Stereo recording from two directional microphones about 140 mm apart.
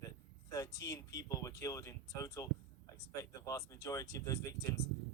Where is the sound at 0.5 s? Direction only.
25° left (ahead or behind).